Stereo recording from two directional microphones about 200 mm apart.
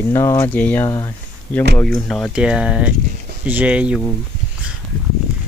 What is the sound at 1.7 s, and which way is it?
Speech, 5° left (ahead or behind).